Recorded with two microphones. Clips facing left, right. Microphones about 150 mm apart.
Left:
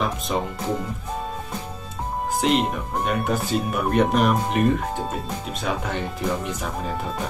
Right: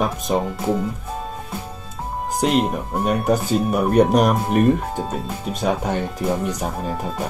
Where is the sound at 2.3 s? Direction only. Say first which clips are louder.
Right 3 dB; centre (ahead or behind).